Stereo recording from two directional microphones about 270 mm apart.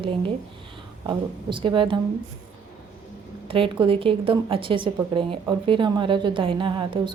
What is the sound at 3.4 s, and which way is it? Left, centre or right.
A woman's voice, centre.